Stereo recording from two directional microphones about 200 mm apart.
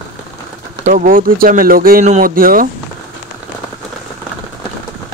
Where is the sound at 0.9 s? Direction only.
40° right (ahead or behind).